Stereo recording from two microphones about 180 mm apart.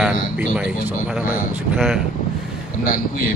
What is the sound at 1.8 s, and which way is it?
Speech, 5° right (ahead or behind).